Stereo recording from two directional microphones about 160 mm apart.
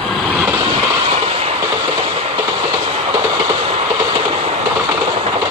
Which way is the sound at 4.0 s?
30° right (ahead or behind).